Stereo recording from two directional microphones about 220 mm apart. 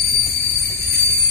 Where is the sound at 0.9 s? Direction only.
50° left (ahead or behind).